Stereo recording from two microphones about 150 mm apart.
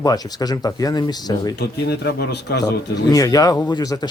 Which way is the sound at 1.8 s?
90° left.